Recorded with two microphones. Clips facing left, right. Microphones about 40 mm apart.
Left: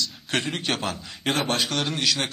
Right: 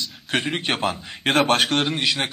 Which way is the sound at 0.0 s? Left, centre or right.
Right.